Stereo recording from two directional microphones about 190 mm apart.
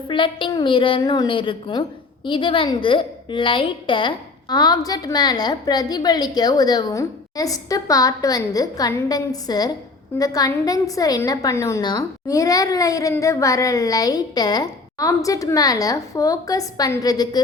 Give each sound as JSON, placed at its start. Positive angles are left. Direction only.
{"t": 0.1, "sound": "a woman's voice", "side_deg": 25}